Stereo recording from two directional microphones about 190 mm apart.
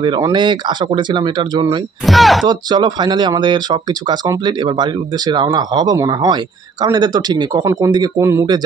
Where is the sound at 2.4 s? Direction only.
25° right (ahead or behind).